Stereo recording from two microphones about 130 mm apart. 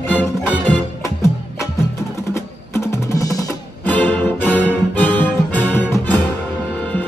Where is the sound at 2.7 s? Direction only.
20° left (ahead or behind).